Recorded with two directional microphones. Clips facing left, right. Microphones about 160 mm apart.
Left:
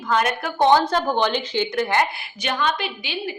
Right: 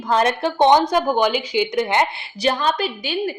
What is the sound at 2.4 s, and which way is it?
Speech, 35° right (ahead or behind).